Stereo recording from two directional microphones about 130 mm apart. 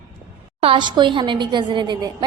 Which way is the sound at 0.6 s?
40° right (ahead or behind).